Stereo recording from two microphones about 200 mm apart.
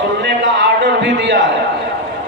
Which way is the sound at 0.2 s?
60° right (ahead or behind).